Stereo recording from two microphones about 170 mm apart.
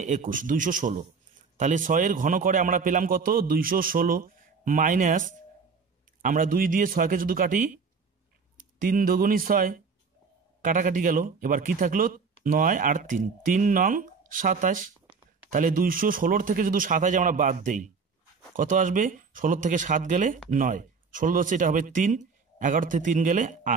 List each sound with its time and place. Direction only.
0.0 s speech: 50° right (ahead or behind)